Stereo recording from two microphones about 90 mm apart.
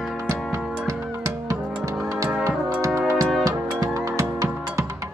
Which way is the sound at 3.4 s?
40° right (ahead or behind).